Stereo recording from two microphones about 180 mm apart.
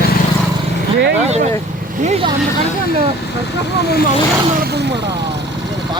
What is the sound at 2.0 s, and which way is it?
Speech, 35° right (ahead or behind).